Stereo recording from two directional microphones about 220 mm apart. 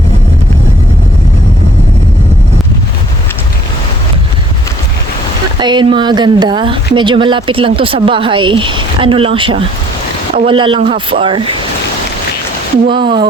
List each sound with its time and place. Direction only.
5.5 s speech: 20° right (ahead or behind)
12.9 s speech: 20° right (ahead or behind)